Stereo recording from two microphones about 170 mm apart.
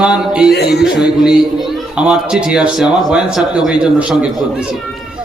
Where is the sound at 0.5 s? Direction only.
75° left (ahead or behind).